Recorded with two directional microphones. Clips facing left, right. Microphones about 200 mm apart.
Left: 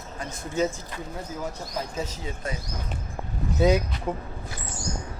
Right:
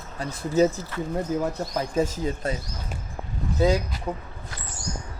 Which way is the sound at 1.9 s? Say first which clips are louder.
Right 8 dB; 50° right (ahead or behind).